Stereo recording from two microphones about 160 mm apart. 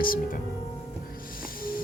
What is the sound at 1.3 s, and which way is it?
Music, 65° left (ahead or behind).